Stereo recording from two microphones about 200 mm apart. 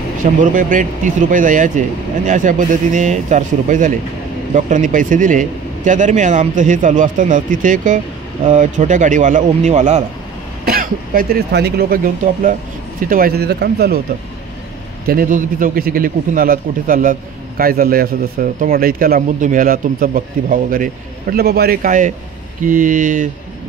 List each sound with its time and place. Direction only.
0.2 s speech: 40° right (ahead or behind)
10.6 s a man's voice: 45° right (ahead or behind)
15.0 s a man's voice: 45° right (ahead or behind)